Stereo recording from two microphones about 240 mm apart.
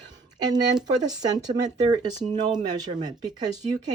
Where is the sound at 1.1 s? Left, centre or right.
Centre.